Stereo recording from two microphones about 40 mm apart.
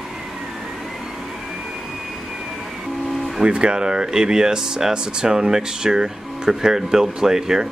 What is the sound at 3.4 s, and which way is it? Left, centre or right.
Speech, right.